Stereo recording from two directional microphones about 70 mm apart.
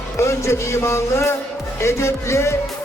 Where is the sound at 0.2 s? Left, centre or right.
Left.